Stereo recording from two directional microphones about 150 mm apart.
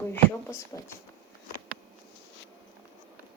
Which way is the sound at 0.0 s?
15° left (ahead or behind).